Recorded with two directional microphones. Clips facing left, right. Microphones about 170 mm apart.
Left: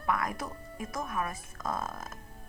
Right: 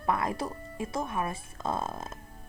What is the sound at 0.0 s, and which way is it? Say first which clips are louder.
A woman's voice: right 3 dB; 30° right (ahead or behind).